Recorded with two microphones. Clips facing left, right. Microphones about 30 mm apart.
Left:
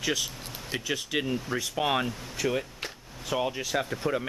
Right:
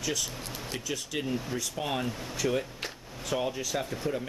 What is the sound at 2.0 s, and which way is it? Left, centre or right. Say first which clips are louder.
Speech: left 1 dB; centre.